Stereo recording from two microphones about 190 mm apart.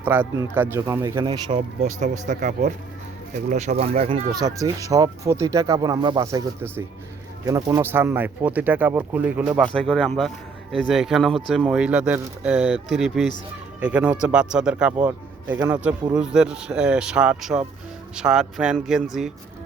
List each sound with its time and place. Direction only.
0.0 s speech: 10° right (ahead or behind); by 4.2 s 30° right (ahead or behind)
4.4 s speech: 20° right (ahead or behind)
9.6 s speech: 5° left (ahead or behind)